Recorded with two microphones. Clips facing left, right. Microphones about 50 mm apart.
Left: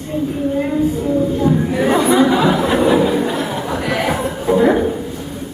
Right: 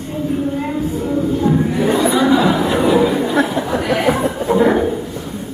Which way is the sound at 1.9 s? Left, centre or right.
Left.